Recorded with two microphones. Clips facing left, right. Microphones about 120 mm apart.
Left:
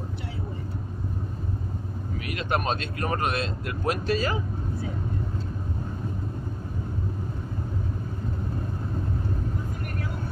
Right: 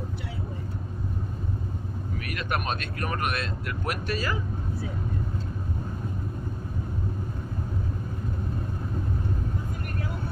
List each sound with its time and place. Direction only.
2.2 s speech: 25° left (ahead or behind)